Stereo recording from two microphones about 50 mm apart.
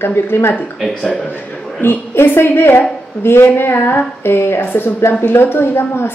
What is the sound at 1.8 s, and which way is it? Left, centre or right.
A woman's voice, left.